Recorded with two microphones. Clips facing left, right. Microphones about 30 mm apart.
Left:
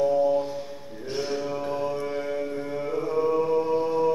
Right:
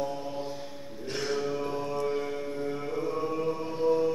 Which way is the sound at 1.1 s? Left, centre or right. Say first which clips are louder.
Left 2 dB; centre.